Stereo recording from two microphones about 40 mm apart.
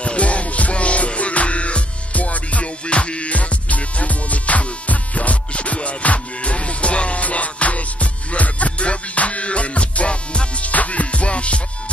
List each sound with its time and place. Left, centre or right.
0.0 s music: left
10.7 s music: left